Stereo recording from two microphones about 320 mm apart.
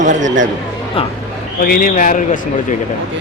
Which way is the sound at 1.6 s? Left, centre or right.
Left.